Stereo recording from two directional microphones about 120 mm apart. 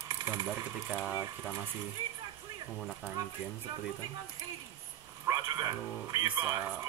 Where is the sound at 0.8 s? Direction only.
10° right (ahead or behind).